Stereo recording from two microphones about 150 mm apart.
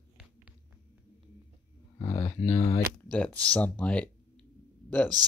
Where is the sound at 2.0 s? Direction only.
25° left (ahead or behind).